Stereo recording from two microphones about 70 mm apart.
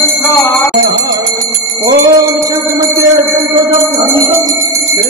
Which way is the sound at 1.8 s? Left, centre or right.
Right.